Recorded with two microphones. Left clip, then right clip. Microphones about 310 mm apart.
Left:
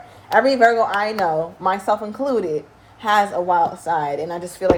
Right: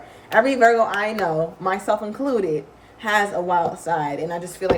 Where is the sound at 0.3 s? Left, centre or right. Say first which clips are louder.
Left 1 dB; centre.